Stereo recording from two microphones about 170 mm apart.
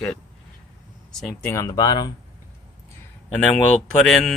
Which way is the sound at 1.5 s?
20° left (ahead or behind).